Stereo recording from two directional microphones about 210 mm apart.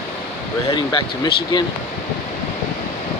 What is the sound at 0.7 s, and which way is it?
Speech, 20° left (ahead or behind).